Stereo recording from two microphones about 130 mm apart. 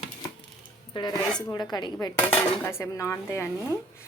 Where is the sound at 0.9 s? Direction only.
35° left (ahead or behind).